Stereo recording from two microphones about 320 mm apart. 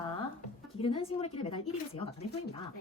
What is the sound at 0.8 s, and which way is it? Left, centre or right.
Speech, centre.